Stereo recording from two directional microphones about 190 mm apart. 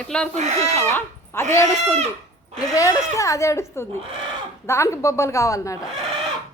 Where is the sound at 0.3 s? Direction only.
35° right (ahead or behind).